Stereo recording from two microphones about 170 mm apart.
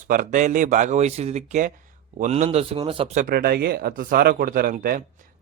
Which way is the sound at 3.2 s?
60° right (ahead or behind).